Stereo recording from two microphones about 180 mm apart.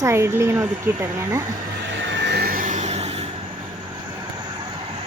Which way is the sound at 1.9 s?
75° right (ahead or behind).